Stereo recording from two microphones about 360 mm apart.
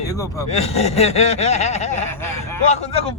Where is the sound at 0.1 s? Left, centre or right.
Centre.